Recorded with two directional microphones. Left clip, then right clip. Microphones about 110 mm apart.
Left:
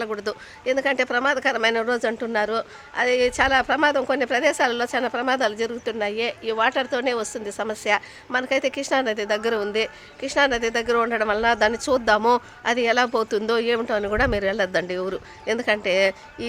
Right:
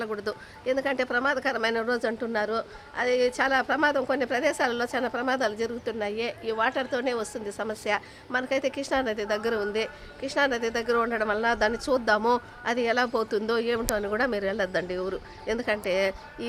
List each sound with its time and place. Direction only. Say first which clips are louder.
0.0 s speech: left 4 dB; 50° left (ahead or behind); by 16.5 s 65° left (ahead or behind)